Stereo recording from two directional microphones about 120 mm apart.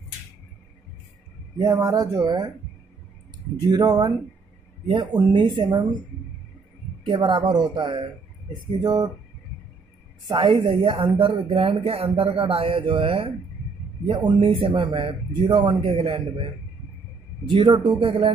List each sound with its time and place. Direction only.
1.6 s speech: 30° right (ahead or behind)
3.6 s speech: 35° right (ahead or behind)
5.1 s speech: 40° right (ahead or behind)
7.1 s speech: 45° right (ahead or behind)
10.3 s speech: 45° right (ahead or behind)
17.5 s speech: 40° right (ahead or behind)